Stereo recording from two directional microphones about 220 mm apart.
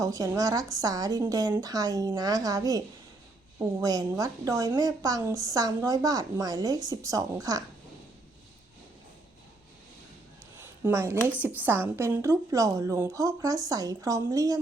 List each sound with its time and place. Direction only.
0.0 s a woman's voice: 15° right (ahead or behind)
10.6 s a sound: 10° right (ahead or behind)
11.3 s a woman's voice: 5° right (ahead or behind)